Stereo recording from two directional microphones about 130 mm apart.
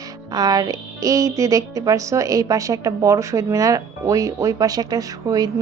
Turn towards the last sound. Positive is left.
turn(degrees=-30)  # may be behind; listen again after turning